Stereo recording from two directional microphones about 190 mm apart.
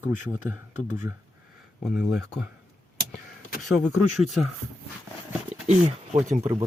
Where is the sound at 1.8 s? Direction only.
Centre (ahead or behind).